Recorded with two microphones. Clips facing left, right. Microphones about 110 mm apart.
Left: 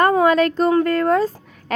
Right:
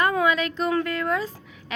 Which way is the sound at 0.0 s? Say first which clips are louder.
Left 7 dB; 40° left (ahead or behind).